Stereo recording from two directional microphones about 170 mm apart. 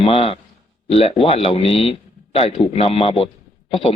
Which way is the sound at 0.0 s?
35° left (ahead or behind).